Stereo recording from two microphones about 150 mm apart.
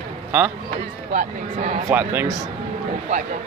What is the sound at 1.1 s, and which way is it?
Speech, 50° right (ahead or behind).